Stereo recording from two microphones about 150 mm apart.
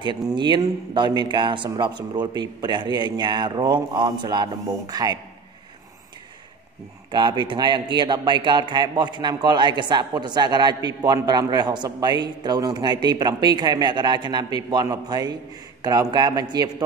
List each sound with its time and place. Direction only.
0.4 s a man's voice: 30° right (ahead or behind)
7.1 s a man's voice: 30° right (ahead or behind)